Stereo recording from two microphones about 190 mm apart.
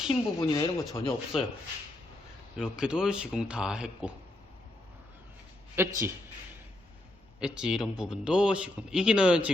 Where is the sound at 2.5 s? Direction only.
5° right (ahead or behind).